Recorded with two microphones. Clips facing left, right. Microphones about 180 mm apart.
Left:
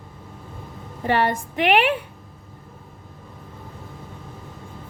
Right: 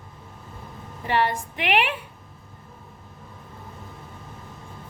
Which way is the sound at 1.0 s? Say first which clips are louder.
Left 3 dB; 50° left (ahead or behind).